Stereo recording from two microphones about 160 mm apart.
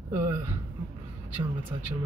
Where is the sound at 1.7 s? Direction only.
25° right (ahead or behind).